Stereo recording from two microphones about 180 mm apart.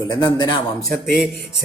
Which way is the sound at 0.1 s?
25° left (ahead or behind).